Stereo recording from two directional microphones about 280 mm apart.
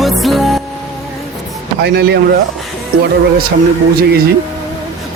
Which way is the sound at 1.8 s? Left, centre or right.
Right.